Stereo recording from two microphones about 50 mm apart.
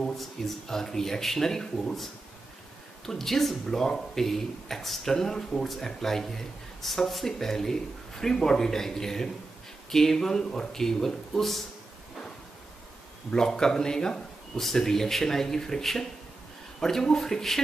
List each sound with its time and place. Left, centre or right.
0.2 s speech: centre
3.1 s speech: centre
13.3 s speech: centre